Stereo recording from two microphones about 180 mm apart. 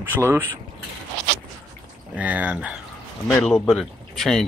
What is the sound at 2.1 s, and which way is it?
Speech, 10° right (ahead or behind).